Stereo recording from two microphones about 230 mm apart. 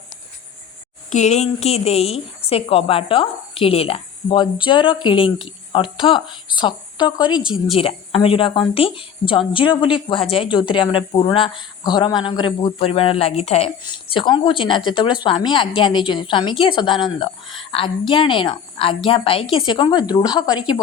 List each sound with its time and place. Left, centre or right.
1.1 s a woman's voice: left